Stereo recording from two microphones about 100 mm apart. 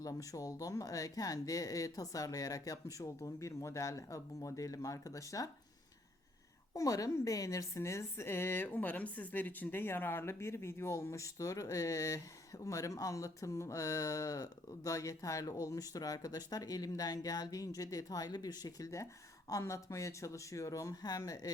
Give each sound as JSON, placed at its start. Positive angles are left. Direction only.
{"t": 0.0, "sound": "a woman's voice", "side_deg": 35}
{"t": 6.7, "sound": "a woman's voice", "side_deg": 35}